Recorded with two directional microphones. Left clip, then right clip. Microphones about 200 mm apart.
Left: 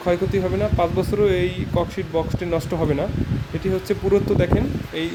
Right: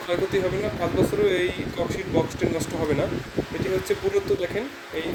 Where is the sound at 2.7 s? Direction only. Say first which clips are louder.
Left 4 dB; 10° left (ahead or behind).